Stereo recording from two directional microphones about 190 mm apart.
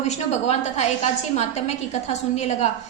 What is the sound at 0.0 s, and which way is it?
A woman's voice, 35° left (ahead or behind).